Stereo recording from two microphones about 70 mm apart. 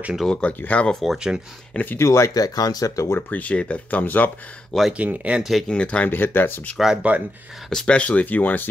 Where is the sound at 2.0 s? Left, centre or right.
Left.